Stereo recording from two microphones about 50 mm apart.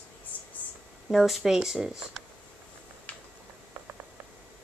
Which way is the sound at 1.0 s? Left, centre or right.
Centre.